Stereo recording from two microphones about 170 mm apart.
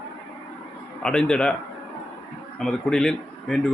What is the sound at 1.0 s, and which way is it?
Speech, 5° left (ahead or behind).